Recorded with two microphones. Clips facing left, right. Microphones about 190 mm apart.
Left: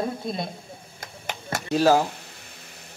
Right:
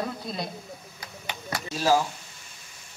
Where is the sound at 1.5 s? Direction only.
60° left (ahead or behind).